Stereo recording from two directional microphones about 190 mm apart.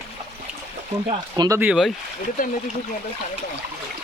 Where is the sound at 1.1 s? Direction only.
20° right (ahead or behind).